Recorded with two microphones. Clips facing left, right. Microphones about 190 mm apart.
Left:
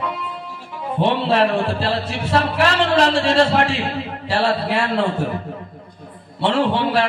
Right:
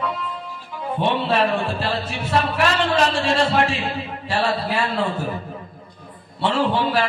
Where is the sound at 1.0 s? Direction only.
75° left (ahead or behind).